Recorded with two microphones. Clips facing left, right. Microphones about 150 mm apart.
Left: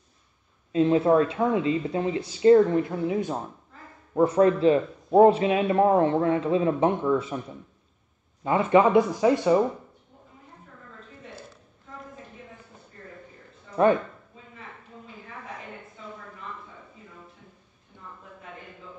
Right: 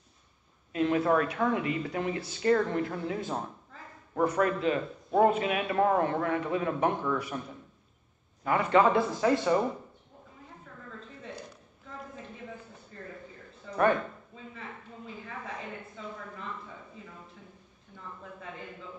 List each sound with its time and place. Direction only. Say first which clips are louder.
0.7 s speech: left 6 dB; 25° left (ahead or behind)
8.5 s speech: left 4 dB; 20° left (ahead or behind)